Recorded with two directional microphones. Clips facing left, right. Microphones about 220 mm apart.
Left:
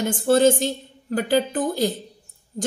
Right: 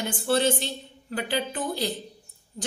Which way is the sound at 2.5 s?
35° left (ahead or behind).